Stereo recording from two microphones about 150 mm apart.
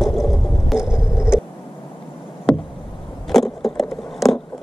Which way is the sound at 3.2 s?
Centre (ahead or behind).